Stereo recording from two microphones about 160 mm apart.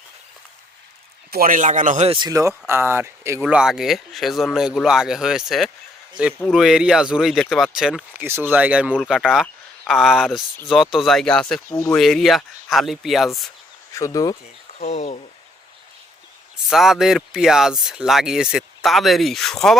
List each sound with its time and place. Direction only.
1.3 s speech: 60° right (ahead or behind)
2.0 s speech: 30° right (ahead or behind)
3.4 s speech: 5° right (ahead or behind)
11.7 s speech: 20° left (ahead or behind)
11.9 s speech: centre (ahead or behind)
13.9 s speech: 20° left (ahead or behind)
14.8 s speech: 45° left (ahead or behind)
16.6 s speech: centre (ahead or behind)